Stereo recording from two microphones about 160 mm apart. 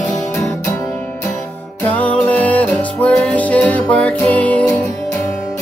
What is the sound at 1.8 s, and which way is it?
Music, 10° left (ahead or behind).